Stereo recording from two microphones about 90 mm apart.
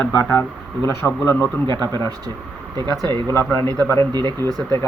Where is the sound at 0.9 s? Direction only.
30° left (ahead or behind).